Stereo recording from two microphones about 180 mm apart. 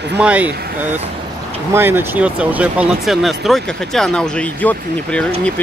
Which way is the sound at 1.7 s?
10° right (ahead or behind).